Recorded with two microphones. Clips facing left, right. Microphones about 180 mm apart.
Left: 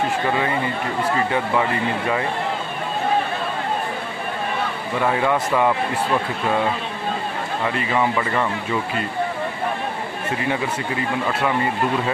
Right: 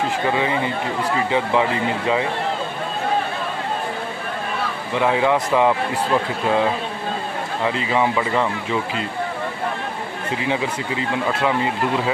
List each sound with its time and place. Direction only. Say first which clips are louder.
1.3 s speech: right 2 dB; 20° right (ahead or behind)
5.0 s speech: right 2 dB; 15° right (ahead or behind)
7.6 s speech: right 2 dB; 10° right (ahead or behind)